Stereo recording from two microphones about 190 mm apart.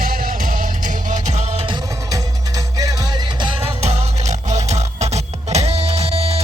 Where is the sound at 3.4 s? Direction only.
30° right (ahead or behind).